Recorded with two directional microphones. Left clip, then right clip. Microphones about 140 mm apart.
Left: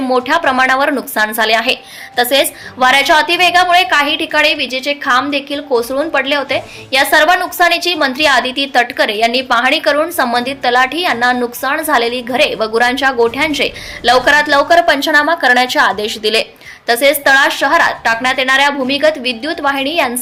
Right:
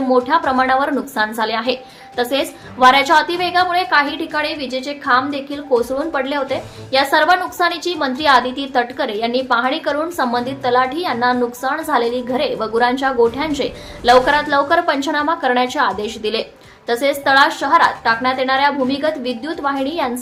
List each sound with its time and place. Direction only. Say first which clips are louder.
0.1 s speech: left 2 dB; 15° left (ahead or behind)